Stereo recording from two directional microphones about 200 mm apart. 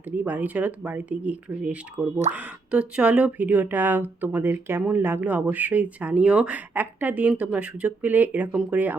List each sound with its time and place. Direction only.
0.2 s speech: 10° right (ahead or behind)
2.3 s speech: 30° right (ahead or behind)
2.7 s speech: 5° right (ahead or behind)